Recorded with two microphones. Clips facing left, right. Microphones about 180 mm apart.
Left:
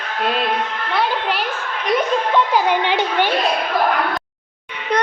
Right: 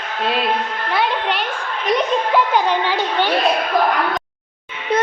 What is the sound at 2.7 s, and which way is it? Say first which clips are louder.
Speech: left 1 dB; 15° left (ahead or behind).